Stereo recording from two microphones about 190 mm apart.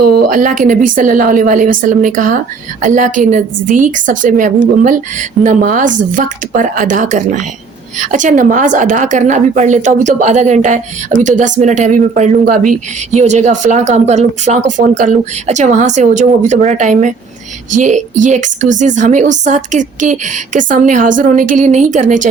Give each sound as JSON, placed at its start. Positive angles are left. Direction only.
{"t": 0.1, "sound": "a woman's voice", "side_deg": -45}